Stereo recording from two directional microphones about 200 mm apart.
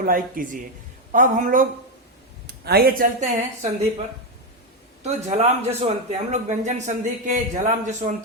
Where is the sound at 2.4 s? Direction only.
55° right (ahead or behind).